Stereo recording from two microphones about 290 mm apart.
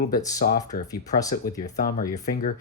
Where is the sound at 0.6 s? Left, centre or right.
Centre.